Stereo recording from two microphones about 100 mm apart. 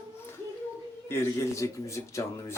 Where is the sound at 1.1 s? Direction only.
25° left (ahead or behind).